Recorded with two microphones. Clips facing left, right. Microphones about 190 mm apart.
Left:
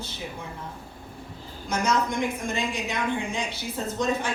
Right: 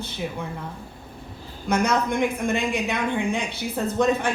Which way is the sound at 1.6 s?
60° right (ahead or behind).